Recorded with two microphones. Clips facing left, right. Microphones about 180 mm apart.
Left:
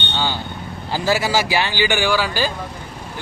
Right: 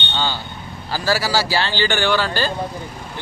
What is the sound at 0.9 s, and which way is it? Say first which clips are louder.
A man's voice: left 1 dB; 20° left (ahead or behind).